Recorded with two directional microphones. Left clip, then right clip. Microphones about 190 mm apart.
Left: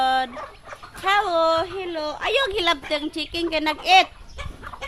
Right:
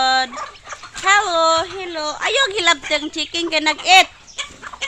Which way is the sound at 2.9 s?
25° right (ahead or behind).